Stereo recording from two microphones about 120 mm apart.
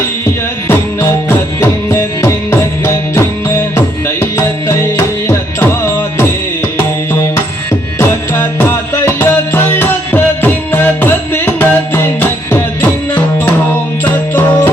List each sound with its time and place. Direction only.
0.7 s music: 20° left (ahead or behind)
7.9 s music: 20° left (ahead or behind)